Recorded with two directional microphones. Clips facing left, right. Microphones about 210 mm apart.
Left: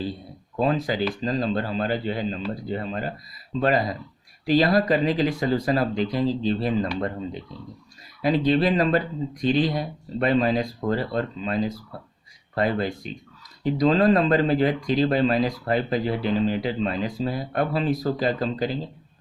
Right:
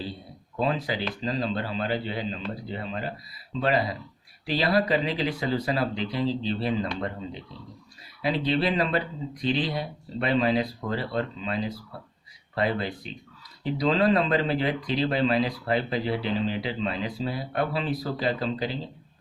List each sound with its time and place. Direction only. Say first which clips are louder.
0.6 s speech: left 4 dB; 45° left (ahead or behind)